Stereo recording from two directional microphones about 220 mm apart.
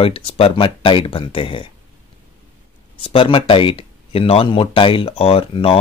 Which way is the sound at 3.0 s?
25° left (ahead or behind).